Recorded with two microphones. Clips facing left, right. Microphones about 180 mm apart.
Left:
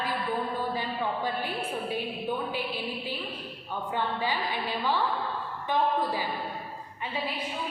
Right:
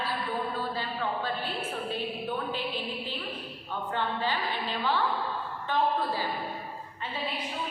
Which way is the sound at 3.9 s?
10° left (ahead or behind).